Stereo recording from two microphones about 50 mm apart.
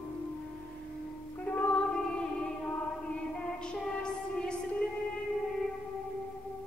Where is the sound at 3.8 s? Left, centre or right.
Centre.